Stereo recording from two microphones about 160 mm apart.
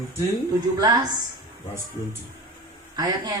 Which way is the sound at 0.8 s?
25° right (ahead or behind).